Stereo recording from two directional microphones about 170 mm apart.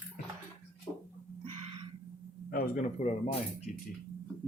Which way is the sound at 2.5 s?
55° left (ahead or behind).